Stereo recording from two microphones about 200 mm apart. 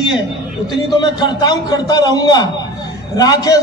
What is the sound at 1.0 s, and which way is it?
A man's voice, 20° left (ahead or behind).